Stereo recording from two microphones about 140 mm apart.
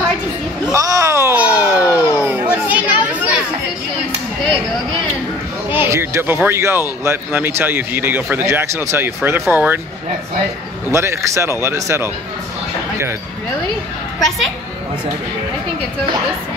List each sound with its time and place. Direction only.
0.7 s a sound: 25° right (ahead or behind)
5.7 s speech: 15° right (ahead or behind)
10.9 s speech: 20° right (ahead or behind)